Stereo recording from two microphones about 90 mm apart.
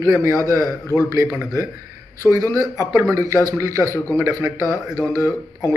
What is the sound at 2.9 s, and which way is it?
A man's voice, 35° right (ahead or behind).